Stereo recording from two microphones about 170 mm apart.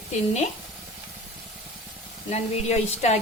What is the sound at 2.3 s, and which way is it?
Speech, 40° left (ahead or behind).